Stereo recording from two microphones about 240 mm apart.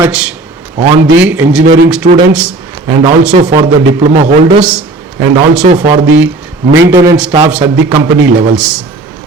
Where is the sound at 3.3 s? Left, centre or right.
Right.